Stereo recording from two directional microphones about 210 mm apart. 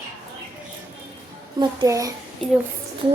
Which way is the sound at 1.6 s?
20° right (ahead or behind).